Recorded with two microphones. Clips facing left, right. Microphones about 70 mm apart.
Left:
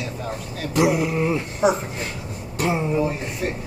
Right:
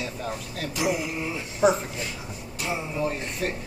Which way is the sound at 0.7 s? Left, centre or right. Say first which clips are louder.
Left 8 dB; left.